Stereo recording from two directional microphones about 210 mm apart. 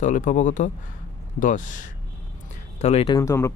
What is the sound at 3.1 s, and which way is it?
Speech, 15° left (ahead or behind).